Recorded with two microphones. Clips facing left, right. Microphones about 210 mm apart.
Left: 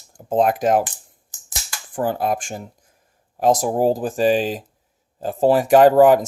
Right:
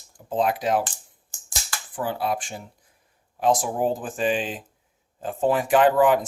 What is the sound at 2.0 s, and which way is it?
Speech, 45° left (ahead or behind).